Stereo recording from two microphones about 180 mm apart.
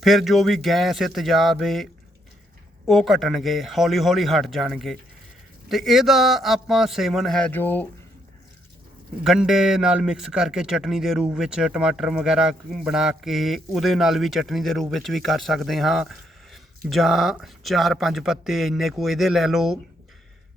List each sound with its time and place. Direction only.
0.0 s a man's voice: centre (ahead or behind)
9.2 s a man's voice: 5° right (ahead or behind)